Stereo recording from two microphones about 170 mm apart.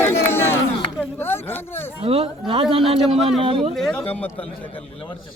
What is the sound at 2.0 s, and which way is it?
Speech, 35° right (ahead or behind).